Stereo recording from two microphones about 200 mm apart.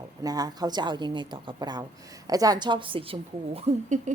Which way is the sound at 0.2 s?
20° right (ahead or behind).